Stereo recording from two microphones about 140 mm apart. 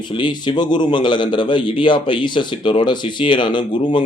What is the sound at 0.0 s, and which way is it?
A man's voice, 35° left (ahead or behind).